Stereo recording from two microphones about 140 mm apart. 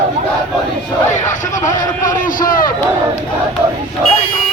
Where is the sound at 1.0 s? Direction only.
60° left (ahead or behind); by 2.7 s 85° left.